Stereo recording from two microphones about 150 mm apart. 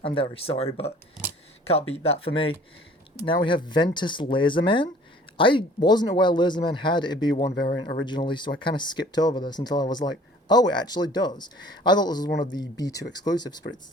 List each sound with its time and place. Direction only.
0.0 s speech: 35° left (ahead or behind)
7.5 s speech: 90° left
7.8 s speech: 30° left (ahead or behind)